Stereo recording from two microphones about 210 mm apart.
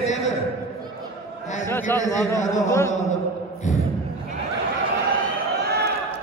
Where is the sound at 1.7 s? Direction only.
10° left (ahead or behind).